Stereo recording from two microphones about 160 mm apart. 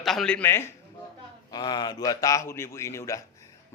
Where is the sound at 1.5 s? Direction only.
25° left (ahead or behind).